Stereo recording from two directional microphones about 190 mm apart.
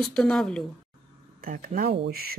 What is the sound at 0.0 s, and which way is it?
Speech, 5° left (ahead or behind).